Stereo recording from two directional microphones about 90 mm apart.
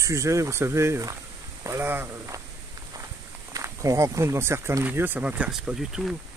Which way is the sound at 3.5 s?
40° right (ahead or behind).